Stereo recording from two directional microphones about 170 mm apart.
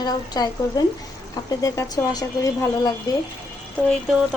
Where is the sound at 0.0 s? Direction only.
25° left (ahead or behind).